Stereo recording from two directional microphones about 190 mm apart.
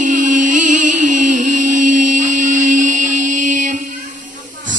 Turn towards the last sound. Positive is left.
turn(degrees=-40)  # may be behind; listen again after turning